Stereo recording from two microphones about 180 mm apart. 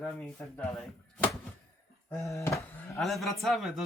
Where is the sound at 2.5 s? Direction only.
Centre (ahead or behind).